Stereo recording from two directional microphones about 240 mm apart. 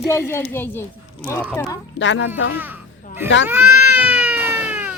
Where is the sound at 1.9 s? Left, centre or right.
Left.